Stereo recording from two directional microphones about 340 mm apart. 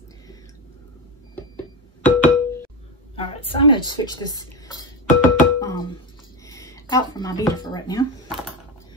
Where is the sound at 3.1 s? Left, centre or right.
Centre.